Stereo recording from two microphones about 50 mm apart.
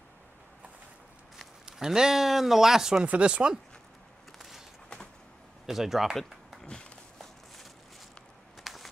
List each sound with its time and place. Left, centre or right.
1.7 s speech: centre
3.0 s speech: right
4.4 s a sound: centre
5.7 s speech: centre
6.6 s walk: centre
8.6 s a sound: centre